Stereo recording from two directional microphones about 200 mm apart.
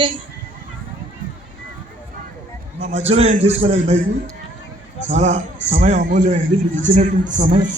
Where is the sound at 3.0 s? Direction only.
30° right (ahead or behind).